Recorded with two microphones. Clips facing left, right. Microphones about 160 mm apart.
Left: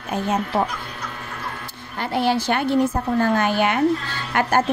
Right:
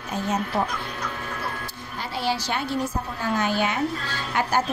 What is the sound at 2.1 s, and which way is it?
Speech, 55° left (ahead or behind).